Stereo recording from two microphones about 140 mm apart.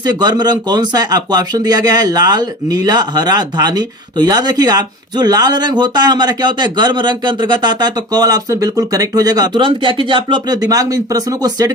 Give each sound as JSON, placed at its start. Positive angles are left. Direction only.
{"t": 0.0, "sound": "speech", "side_deg": -30}